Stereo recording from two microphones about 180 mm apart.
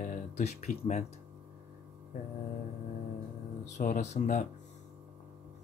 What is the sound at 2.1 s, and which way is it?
Speech, 50° left (ahead or behind).